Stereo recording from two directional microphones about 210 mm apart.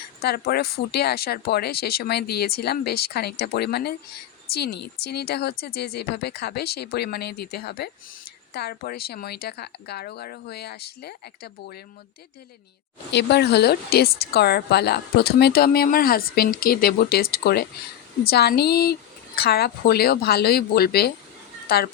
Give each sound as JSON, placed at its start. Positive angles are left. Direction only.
{"t": 0.2, "sound": "a woman's voice", "side_deg": 50}
{"t": 13.1, "sound": "a woman's voice", "side_deg": 55}